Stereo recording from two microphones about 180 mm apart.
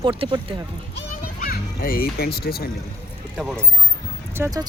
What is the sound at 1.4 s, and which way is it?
A child's voice, 50° left (ahead or behind).